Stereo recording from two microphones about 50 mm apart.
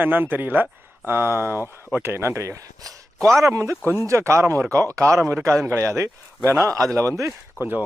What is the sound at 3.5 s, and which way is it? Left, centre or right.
Speech, right.